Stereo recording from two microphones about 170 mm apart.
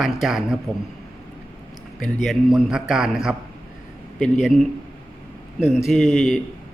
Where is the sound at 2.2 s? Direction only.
Centre (ahead or behind).